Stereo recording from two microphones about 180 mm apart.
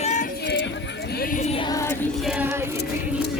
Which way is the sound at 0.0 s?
40° left (ahead or behind).